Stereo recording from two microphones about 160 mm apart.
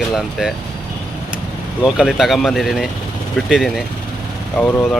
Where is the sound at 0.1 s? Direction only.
Centre (ahead or behind).